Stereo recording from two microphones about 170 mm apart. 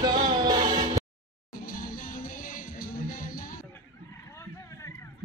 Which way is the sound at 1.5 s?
55° left (ahead or behind).